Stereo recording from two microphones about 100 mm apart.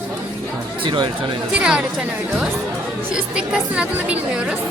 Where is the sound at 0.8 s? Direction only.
50° right (ahead or behind).